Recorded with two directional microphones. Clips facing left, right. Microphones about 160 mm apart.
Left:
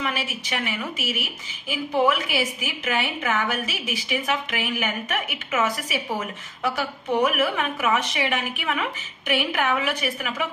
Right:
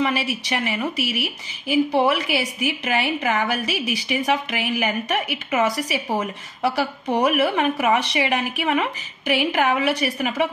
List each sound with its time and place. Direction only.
0.0 s a woman's voice: 35° right (ahead or behind)